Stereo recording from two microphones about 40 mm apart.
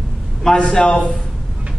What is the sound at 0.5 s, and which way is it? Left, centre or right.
Speech, left.